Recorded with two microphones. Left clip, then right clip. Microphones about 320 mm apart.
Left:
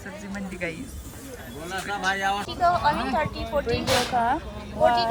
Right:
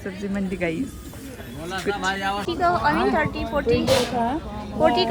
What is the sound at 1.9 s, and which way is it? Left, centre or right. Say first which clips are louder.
Speech: left 2 dB; right.